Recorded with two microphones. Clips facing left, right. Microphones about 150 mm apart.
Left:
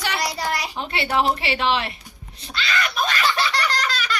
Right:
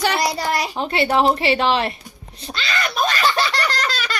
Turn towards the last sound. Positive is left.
turn(degrees=-35)  # may be behind; listen again after turning